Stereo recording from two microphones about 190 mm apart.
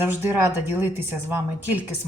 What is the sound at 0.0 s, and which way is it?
Speech, 10° right (ahead or behind).